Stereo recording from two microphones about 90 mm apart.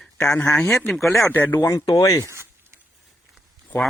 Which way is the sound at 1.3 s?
20° left (ahead or behind).